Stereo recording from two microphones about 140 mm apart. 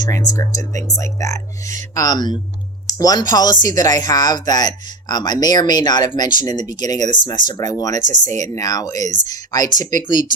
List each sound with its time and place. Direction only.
0.0 s speech: 25° left (ahead or behind)
7.9 s speech: 55° right (ahead or behind)
8.4 s speech: 25° left (ahead or behind)